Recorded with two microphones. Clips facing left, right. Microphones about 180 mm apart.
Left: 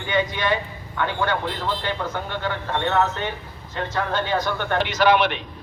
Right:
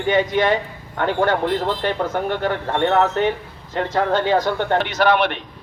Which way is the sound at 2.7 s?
55° right (ahead or behind).